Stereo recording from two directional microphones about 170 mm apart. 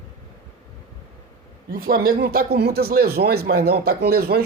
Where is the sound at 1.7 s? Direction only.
55° right (ahead or behind).